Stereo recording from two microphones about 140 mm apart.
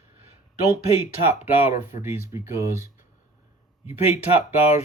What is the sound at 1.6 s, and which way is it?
Speech, 55° left (ahead or behind).